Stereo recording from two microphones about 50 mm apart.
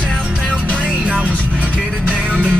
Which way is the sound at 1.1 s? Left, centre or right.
Right.